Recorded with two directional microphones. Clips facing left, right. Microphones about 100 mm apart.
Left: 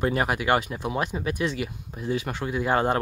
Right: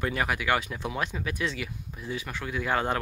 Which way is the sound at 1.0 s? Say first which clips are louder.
Left 4 dB; 20° left (ahead or behind).